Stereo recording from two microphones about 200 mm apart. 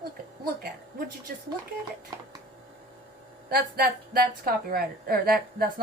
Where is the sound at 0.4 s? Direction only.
50° right (ahead or behind).